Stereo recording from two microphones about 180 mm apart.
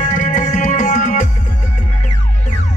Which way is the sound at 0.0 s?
45° left (ahead or behind).